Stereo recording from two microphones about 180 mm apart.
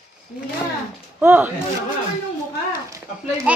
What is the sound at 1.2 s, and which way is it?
Speech, 10° right (ahead or behind).